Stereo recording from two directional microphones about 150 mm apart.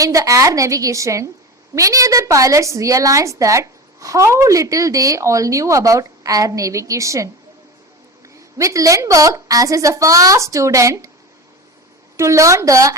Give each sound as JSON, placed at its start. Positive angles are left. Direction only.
{"t": 0.0, "sound": "a woman's voice", "side_deg": -20}
{"t": 8.4, "sound": "a woman's voice", "side_deg": -20}
{"t": 12.1, "sound": "a woman's voice", "side_deg": -20}